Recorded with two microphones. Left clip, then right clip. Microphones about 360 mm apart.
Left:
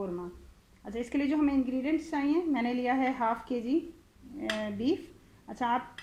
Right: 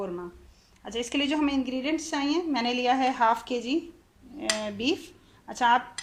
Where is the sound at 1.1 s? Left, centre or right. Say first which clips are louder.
Right 2 dB; right.